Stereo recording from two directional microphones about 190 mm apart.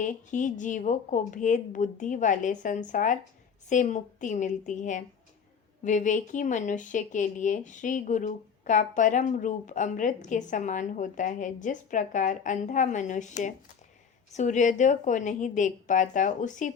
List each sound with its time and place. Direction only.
0.0 s speech: 40° left (ahead or behind)